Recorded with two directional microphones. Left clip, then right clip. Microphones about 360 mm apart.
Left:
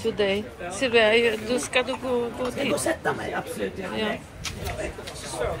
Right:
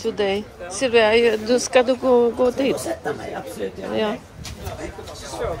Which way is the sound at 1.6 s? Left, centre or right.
Right.